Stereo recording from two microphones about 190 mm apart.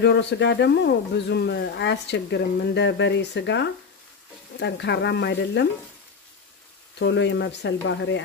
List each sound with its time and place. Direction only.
0.0 s speech: 65° left (ahead or behind)
7.0 s speech: 70° left (ahead or behind)